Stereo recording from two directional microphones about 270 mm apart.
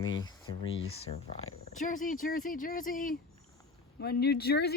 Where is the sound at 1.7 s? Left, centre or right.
Left.